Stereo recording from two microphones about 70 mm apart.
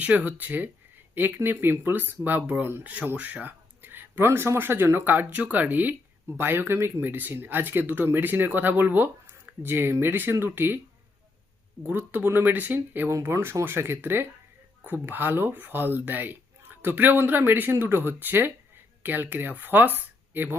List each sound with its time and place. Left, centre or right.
0.0 s speech: right
11.8 s speech: right
13.3 s speech: right